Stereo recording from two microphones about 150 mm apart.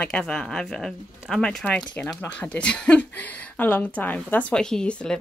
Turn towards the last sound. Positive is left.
turn(degrees=5)  # may be behind; listen again after turning